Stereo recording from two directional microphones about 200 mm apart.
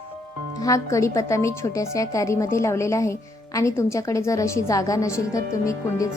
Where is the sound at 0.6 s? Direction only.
15° left (ahead or behind).